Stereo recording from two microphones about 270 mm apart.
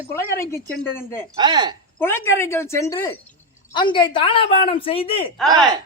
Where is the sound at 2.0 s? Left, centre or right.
Centre.